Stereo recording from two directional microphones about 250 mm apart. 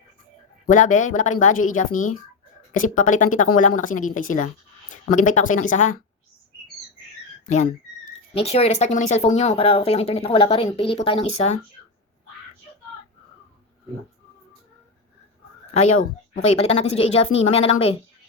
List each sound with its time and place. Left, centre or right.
0.7 s speech: left
8.4 s speech: left
16.3 s speech: left